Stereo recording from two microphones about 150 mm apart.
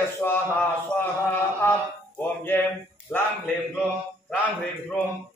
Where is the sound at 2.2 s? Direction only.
15° left (ahead or behind).